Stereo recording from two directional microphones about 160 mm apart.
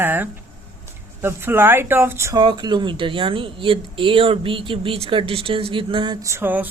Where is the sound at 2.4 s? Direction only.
30° right (ahead or behind).